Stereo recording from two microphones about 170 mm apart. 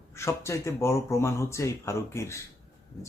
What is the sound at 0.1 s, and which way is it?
Speech, 15° left (ahead or behind).